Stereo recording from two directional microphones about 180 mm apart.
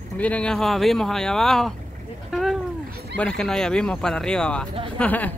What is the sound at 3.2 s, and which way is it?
Speech, 5° left (ahead or behind).